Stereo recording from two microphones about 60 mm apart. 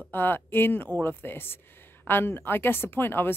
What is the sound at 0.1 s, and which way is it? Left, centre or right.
Speech, left.